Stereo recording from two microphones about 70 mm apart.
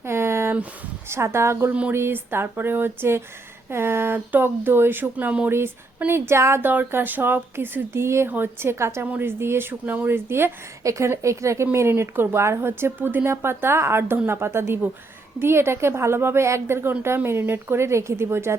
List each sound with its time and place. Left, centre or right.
0.0 s a sound: right
1.0 s speech: right; by 5.5 s centre
5.5 s speech: right
6.7 s speech: right
9.0 s speech: right